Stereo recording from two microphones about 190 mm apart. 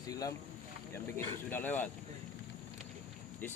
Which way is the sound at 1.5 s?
10° left (ahead or behind).